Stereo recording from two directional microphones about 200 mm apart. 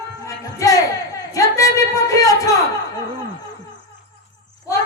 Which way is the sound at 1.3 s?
15° left (ahead or behind).